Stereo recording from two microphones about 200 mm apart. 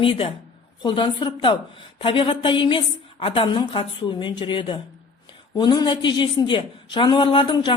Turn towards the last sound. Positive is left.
turn(degrees=25)  # may be behind; listen again after turning